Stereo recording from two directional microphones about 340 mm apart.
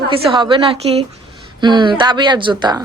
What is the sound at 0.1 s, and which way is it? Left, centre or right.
A woman's voice, centre.